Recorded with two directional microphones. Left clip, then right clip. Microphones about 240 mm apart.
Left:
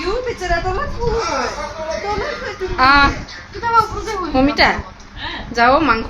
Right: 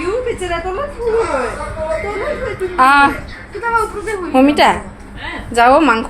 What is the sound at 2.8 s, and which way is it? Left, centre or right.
Speech, centre.